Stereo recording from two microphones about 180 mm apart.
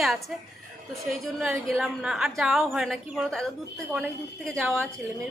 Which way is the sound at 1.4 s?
Centre (ahead or behind).